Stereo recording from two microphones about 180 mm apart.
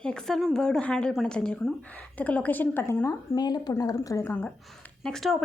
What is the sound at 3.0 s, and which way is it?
A woman's voice, 20° left (ahead or behind).